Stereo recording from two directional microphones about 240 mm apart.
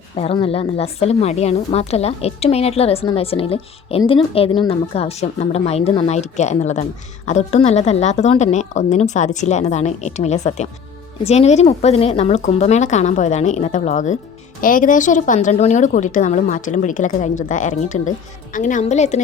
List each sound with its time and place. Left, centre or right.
0.2 s a woman's voice: left